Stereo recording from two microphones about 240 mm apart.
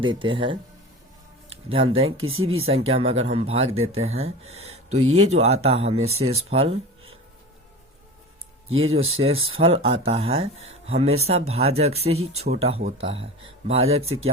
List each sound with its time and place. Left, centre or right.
0.0 s speech: right
2.0 s speech: right
2.6 s speech: right
4.9 s speech: right
5.3 s speech: right
8.7 s speech: right
9.6 s speech: right
13.7 s speech: right
14.0 s speech: right